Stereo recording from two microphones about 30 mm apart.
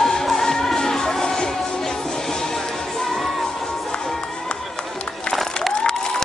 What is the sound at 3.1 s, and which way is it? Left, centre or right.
Music, centre.